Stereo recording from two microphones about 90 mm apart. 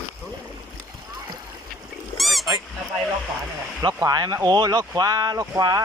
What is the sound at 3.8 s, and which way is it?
Speech, 45° right (ahead or behind).